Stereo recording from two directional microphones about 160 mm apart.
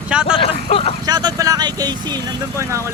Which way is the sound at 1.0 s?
25° right (ahead or behind).